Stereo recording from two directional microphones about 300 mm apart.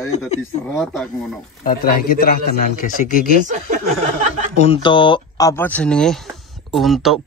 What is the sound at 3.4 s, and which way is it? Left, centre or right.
Speech, right.